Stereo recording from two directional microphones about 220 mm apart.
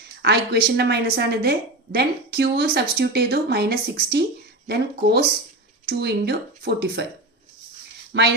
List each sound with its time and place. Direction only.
0.2 s a woman's voice: 50° right (ahead or behind)
8.1 s a woman's voice: 50° right (ahead or behind)